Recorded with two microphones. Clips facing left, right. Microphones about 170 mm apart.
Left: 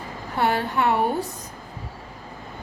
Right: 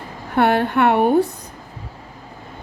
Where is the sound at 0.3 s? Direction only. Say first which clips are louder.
Right 6 dB; 60° right (ahead or behind).